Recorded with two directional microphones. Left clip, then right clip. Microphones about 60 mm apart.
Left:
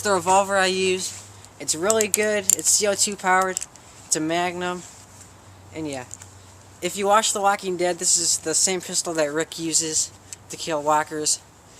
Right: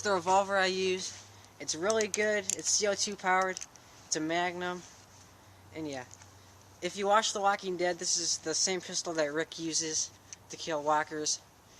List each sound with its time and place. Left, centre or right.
0.0 s speech: centre